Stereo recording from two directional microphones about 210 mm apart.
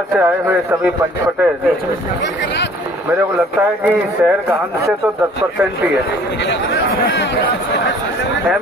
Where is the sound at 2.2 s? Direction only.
55° left (ahead or behind).